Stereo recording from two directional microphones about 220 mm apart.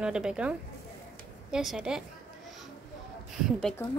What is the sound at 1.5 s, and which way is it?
Speech, centre (ahead or behind).